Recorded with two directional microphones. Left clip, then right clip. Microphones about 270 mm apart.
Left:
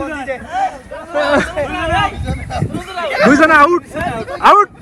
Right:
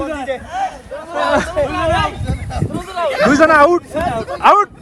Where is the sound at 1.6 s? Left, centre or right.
Right.